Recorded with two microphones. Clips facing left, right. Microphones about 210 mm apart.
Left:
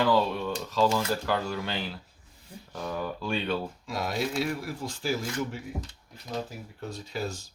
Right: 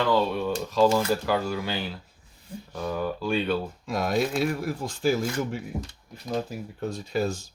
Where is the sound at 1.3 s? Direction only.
5° right (ahead or behind).